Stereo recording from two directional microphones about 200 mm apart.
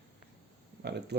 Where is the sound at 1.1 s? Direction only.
60° right (ahead or behind).